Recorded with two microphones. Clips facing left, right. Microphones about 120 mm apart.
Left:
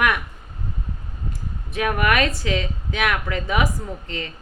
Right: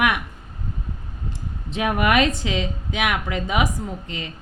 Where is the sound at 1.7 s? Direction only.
20° right (ahead or behind).